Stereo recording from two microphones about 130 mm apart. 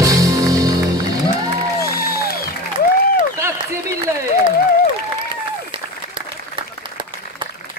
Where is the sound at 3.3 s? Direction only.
20° right (ahead or behind).